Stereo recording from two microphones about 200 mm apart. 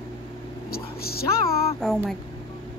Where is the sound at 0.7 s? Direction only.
50° left (ahead or behind).